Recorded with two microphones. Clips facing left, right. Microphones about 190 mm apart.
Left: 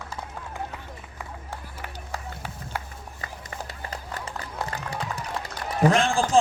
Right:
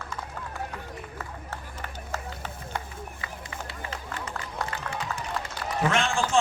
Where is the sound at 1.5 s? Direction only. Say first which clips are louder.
Left 1 dB; 10° left (ahead or behind).